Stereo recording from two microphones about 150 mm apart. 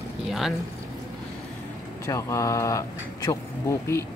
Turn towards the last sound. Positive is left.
turn(degrees=20)  # may be behind; listen again after turning